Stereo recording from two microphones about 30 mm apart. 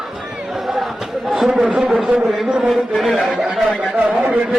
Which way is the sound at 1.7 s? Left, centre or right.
Right.